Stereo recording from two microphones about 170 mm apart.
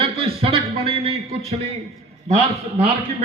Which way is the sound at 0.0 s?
35° right (ahead or behind).